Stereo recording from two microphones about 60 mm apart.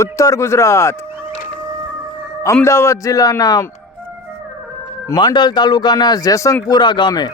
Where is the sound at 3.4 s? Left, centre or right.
Left.